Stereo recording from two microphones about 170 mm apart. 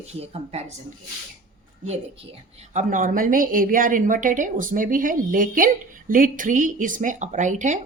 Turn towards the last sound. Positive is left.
turn(degrees=-45)  # may be behind; listen again after turning